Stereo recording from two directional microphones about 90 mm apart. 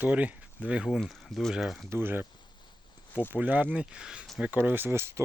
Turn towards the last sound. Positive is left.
turn(degrees=-30)  # may be behind; listen again after turning